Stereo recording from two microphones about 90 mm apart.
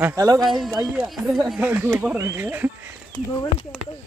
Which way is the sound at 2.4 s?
20° right (ahead or behind).